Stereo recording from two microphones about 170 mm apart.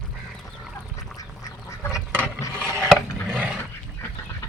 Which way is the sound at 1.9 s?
10° right (ahead or behind).